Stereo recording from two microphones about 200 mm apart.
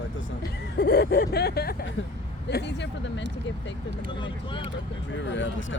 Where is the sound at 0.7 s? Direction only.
55° left (ahead or behind).